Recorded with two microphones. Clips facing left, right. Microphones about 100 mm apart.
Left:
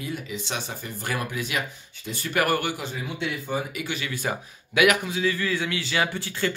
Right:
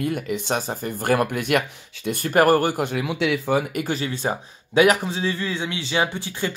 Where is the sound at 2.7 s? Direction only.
65° right (ahead or behind); by 3.7 s 80° right.